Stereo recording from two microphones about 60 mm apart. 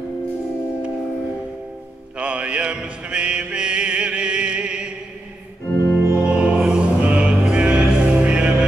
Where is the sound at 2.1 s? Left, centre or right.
Right.